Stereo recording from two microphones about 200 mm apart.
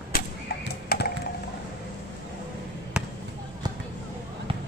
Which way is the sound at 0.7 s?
50° left (ahead or behind).